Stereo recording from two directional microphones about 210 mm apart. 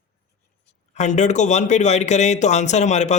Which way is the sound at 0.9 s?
35° left (ahead or behind).